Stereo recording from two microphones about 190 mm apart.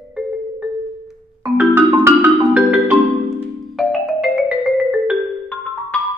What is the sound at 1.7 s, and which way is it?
Marimba, 10° right (ahead or behind).